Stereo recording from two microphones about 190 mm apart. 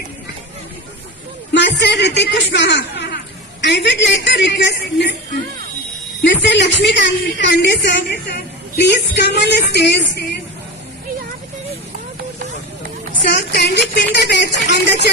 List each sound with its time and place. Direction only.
1.5 s speech: 65° left (ahead or behind)
6.2 s speech: 70° left (ahead or behind)
13.2 s speech: 65° left (ahead or behind)